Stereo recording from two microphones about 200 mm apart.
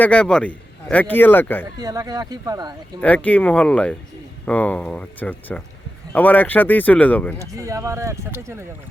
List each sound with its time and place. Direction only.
0.0 s speech: 5° left (ahead or behind)
1.8 s speech: 20° right (ahead or behind)
3.0 s speech: 5° left (ahead or behind)
7.3 s speech: 15° right (ahead or behind)